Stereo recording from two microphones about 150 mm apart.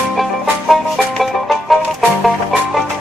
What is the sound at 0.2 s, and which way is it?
Music, centre (ahead or behind).